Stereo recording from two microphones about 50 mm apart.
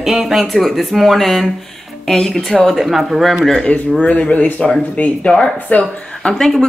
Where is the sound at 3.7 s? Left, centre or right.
Left.